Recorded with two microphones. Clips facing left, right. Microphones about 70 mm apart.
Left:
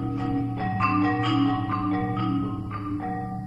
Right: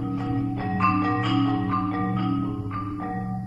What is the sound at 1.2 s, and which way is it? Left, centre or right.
Music, centre.